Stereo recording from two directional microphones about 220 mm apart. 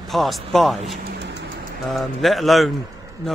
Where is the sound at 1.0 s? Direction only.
50° right (ahead or behind).